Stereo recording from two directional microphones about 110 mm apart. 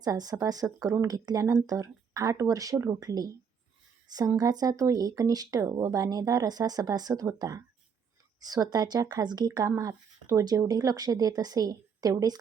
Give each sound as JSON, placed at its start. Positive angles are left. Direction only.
{"t": 0.0, "sound": "speech", "side_deg": -35}
{"t": 4.4, "sound": "speech", "side_deg": -35}